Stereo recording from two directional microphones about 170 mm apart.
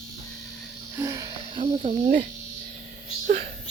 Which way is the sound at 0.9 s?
20° right (ahead or behind).